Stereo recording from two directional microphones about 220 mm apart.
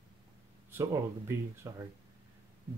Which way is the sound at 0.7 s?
10° right (ahead or behind).